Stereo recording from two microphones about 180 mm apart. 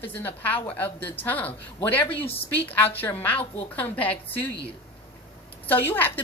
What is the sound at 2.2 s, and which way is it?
Speech, 30° left (ahead or behind).